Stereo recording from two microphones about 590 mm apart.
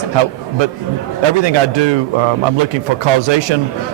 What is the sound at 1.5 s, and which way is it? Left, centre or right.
Speech, right.